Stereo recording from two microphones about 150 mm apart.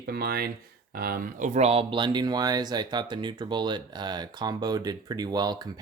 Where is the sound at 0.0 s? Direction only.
90° right.